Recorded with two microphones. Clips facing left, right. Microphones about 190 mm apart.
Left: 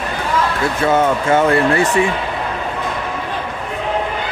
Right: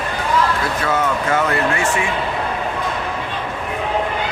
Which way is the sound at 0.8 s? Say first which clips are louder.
Left 6 dB; 25° left (ahead or behind).